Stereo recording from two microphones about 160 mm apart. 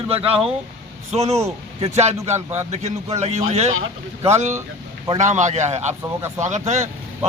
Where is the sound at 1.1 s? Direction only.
40° right (ahead or behind).